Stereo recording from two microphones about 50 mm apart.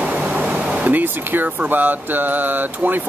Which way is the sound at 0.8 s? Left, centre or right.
Right.